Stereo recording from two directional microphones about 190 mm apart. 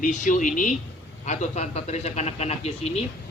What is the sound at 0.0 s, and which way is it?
A man's voice, 45° left (ahead or behind).